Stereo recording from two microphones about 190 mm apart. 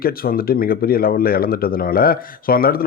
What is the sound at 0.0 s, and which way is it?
Speech, 50° left (ahead or behind).